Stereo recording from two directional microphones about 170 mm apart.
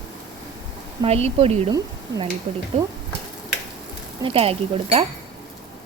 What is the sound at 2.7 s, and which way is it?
Speech, 40° right (ahead or behind).